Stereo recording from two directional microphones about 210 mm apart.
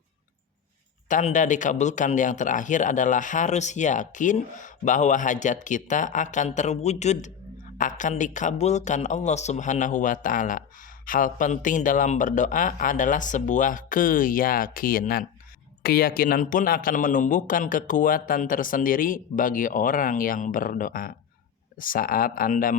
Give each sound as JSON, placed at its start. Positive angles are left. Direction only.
{"t": 1.0, "sound": "speech", "side_deg": 35}